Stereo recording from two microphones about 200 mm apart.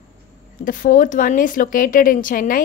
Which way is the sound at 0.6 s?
40° left (ahead or behind).